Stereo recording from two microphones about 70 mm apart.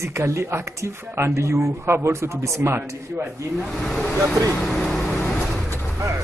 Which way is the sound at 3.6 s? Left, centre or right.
Centre.